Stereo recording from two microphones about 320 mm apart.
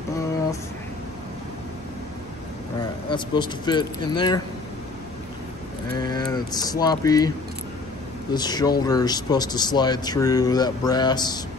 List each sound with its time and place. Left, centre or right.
3.1 s speech: centre
5.9 s speech: centre